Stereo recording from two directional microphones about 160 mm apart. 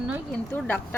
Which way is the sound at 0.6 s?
10° left (ahead or behind).